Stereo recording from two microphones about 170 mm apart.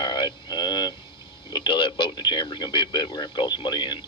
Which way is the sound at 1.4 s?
30° left (ahead or behind).